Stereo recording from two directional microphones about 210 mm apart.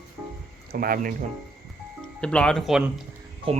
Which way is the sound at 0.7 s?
45° right (ahead or behind).